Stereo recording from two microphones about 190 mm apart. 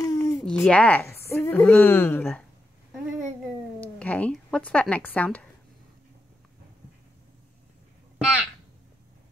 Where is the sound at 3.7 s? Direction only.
10° left (ahead or behind).